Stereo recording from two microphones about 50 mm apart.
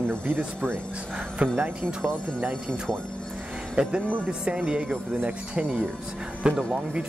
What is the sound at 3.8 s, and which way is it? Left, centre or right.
Speech, right.